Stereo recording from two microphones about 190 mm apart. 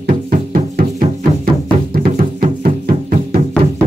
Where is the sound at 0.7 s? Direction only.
50° right (ahead or behind).